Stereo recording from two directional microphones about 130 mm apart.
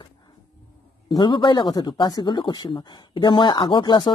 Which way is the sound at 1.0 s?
35° left (ahead or behind).